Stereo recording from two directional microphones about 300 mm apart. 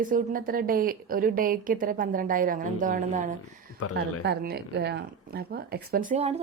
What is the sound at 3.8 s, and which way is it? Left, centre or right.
Speech, left.